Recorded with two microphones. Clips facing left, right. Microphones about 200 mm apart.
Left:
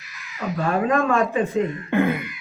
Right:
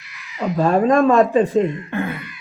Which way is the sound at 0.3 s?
35° right (ahead or behind).